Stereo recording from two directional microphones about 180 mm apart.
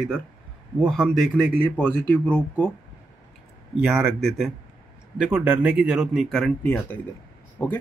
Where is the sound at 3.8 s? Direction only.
5° right (ahead or behind).